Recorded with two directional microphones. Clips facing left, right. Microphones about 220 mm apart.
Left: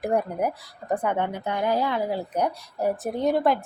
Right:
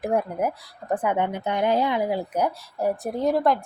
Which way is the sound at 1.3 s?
20° right (ahead or behind).